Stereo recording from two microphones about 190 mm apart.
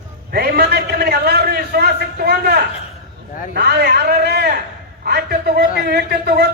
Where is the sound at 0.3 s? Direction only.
55° right (ahead or behind).